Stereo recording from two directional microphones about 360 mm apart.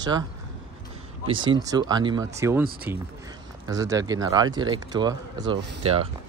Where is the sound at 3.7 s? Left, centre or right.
Centre.